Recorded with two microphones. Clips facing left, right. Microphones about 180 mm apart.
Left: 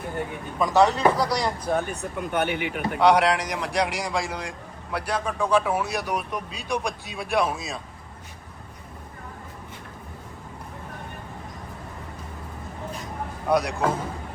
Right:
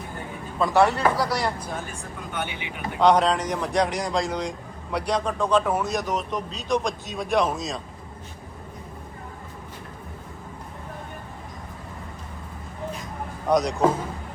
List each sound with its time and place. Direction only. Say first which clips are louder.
0.6 s a man's voice: even; 20° left (ahead or behind)
1.2 s speech: left 1 dB; 5° right (ahead or behind)
1.6 s speech: left 7 dB; 60° left (ahead or behind)
3.0 s a man's voice: right 1 dB; 10° left (ahead or behind)
13.5 s a man's voice: right 1 dB; 5° left (ahead or behind)